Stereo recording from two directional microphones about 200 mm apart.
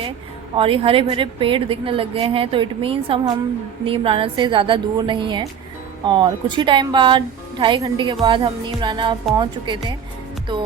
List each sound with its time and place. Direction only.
0.5 s a woman's voice: 25° right (ahead or behind)